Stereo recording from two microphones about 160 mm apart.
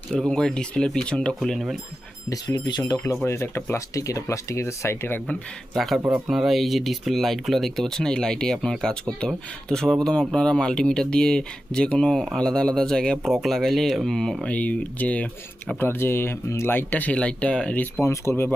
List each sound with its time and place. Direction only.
0.1 s speech: 5° left (ahead or behind)
2.3 s speech: 25° left (ahead or behind)
5.7 s speech: centre (ahead or behind)
18.0 s speech: 15° left (ahead or behind)